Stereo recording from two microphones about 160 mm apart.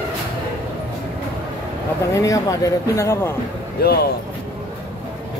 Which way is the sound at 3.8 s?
75° left (ahead or behind).